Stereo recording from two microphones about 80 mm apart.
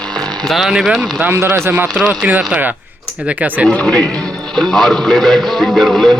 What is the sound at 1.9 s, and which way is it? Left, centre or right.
Speech, centre.